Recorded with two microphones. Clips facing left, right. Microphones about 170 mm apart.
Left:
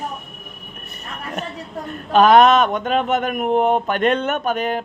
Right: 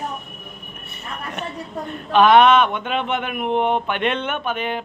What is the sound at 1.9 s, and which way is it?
Speech, 40° left (ahead or behind).